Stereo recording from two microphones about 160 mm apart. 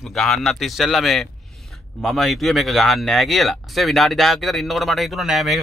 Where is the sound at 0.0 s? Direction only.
Centre (ahead or behind).